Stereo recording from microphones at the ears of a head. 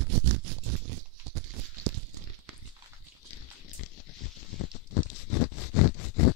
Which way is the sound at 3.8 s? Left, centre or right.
Left.